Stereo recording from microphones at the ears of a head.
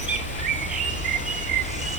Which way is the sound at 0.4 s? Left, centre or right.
Right.